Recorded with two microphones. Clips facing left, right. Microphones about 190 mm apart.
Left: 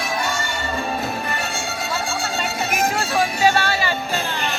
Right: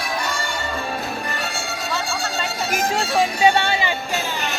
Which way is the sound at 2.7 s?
25° right (ahead or behind).